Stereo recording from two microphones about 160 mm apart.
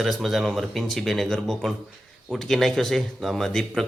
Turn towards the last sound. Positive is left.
turn(degrees=5)  # may be behind; listen again after turning